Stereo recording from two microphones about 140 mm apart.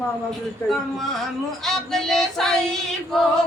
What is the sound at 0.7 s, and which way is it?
Female singing, centre (ahead or behind).